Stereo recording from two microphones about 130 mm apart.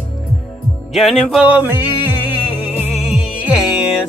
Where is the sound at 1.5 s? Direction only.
15° right (ahead or behind).